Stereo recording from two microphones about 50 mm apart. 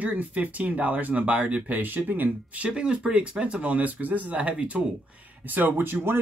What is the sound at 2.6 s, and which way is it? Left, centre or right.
Speech, right.